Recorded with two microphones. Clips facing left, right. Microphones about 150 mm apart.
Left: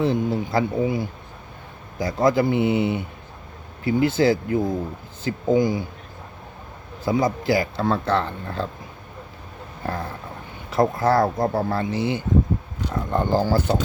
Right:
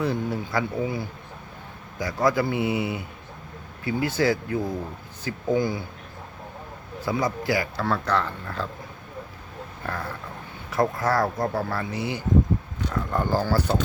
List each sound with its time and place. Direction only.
0.0 s speech: 25° left (ahead or behind)
7.0 s speech: 25° left (ahead or behind)
9.8 s a sound: 25° left (ahead or behind)
10.7 s speech: 25° left (ahead or behind)